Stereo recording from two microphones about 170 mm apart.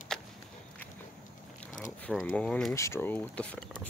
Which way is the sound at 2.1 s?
5° left (ahead or behind).